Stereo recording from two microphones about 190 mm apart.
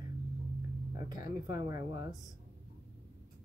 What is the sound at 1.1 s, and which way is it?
Speech, 20° right (ahead or behind).